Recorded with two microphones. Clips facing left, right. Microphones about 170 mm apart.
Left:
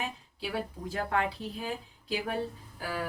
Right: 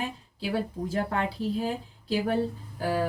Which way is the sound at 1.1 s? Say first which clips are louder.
Right 3 dB; 35° right (ahead or behind).